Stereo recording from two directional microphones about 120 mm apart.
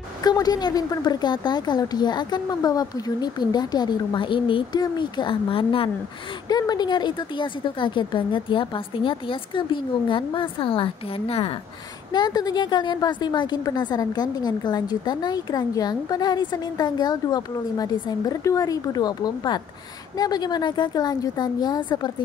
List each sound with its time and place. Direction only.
0.2 s a woman's voice: 35° left (ahead or behind); by 5.9 s 50° left (ahead or behind)
6.5 s a woman's voice: 35° left (ahead or behind); by 11.5 s 55° left (ahead or behind)
12.1 s a woman's voice: 35° left (ahead or behind)